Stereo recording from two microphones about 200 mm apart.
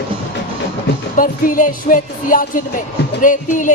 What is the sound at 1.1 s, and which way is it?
Speech, 40° left (ahead or behind).